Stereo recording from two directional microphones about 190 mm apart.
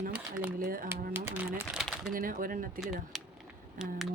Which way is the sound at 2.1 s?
45° right (ahead or behind).